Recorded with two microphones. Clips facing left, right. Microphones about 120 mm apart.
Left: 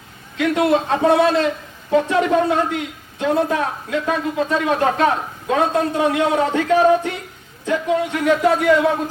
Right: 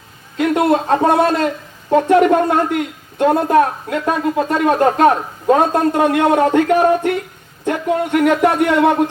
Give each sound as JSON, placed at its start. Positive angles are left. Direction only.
{"t": 0.3, "sound": "a woman's voice", "side_deg": -45}